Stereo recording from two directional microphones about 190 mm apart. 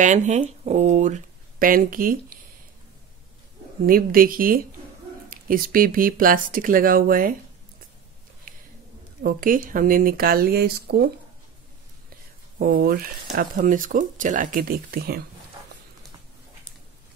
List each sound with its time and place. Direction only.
0.0 s speech: 40° right (ahead or behind)
3.8 s speech: 50° right (ahead or behind)
8.5 s a sound: 50° right (ahead or behind)
9.2 s speech: 45° right (ahead or behind)
12.5 s speech: 50° right (ahead or behind)